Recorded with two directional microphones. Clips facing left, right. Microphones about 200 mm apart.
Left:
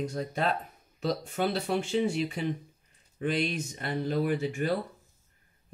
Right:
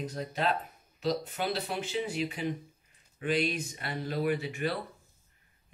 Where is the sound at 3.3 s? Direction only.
45° left (ahead or behind).